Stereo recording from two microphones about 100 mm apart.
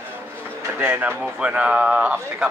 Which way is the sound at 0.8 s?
20° right (ahead or behind).